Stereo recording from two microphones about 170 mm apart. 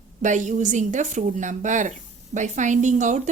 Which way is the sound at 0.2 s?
45° right (ahead or behind).